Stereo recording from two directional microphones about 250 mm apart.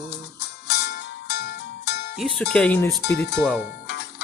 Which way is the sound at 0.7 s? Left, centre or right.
Left.